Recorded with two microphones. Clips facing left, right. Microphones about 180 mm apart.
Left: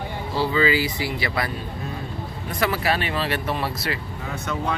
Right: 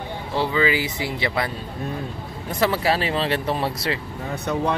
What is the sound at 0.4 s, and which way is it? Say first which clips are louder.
Speech: even; 20° right (ahead or behind).